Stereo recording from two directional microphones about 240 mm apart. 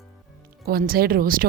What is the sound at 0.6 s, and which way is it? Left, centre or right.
Speech, right.